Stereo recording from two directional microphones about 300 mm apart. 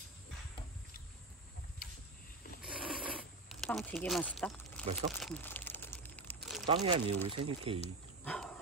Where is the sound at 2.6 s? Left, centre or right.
Centre.